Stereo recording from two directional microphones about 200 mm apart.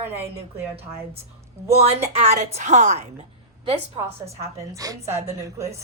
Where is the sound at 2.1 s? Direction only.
30° right (ahead or behind).